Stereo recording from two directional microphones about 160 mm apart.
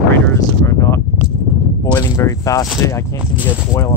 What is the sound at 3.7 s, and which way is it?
Speech, 20° left (ahead or behind).